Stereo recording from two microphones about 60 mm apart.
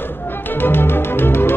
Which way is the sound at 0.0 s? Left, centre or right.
Left.